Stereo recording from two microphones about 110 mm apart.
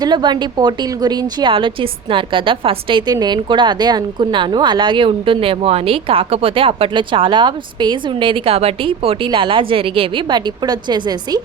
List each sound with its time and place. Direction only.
0.0 s a woman's voice: 40° right (ahead or behind)
3.1 s a woman's voice: 40° right (ahead or behind)